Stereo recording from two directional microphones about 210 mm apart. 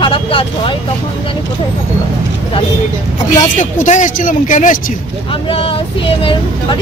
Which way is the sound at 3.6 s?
35° left (ahead or behind).